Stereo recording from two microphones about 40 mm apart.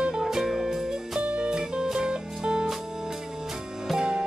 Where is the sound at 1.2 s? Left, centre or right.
Right.